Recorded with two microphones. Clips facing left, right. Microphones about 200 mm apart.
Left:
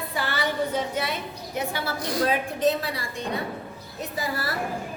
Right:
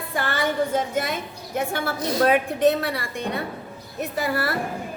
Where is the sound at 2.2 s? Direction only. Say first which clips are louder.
Right 5 dB; 60° right (ahead or behind).